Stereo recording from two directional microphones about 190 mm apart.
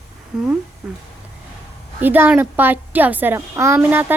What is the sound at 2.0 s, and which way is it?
A child's voice, 10° right (ahead or behind).